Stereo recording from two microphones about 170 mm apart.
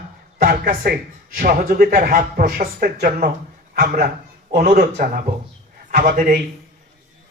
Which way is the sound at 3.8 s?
50° right (ahead or behind).